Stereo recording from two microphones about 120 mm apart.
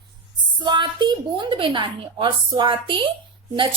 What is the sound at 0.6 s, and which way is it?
A woman's voice, 40° right (ahead or behind).